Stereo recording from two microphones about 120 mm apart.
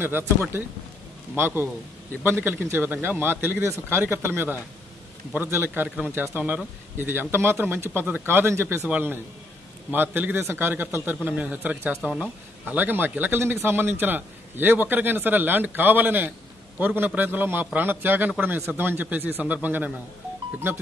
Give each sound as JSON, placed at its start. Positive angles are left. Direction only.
{"t": 0.0, "sound": "a man's voice", "side_deg": -20}